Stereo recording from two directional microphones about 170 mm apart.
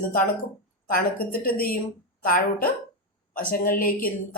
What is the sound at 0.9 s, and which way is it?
A woman's voice, 55° left (ahead or behind).